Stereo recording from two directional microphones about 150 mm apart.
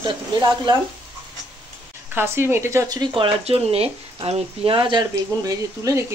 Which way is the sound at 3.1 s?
40° right (ahead or behind).